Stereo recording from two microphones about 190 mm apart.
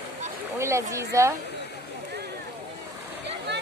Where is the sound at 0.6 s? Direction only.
15° right (ahead or behind).